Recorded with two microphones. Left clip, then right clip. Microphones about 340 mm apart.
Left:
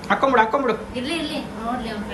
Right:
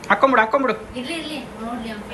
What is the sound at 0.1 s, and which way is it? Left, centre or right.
Speech, centre.